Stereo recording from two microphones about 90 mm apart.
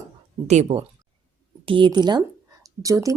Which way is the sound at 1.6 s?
65° right (ahead or behind).